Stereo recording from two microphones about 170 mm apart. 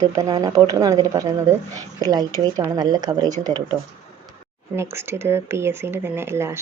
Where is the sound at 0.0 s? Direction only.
20° right (ahead or behind).